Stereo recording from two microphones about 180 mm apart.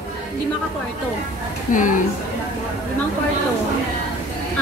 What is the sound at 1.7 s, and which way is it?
Speech, 45° left (ahead or behind).